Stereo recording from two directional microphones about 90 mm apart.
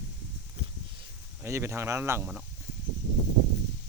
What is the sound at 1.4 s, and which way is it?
Speech, 30° right (ahead or behind).